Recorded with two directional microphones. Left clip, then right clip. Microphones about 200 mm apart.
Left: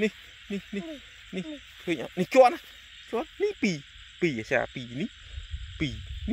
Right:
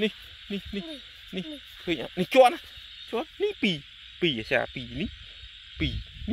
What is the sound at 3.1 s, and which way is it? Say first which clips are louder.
Frog: even; 5° left (ahead or behind).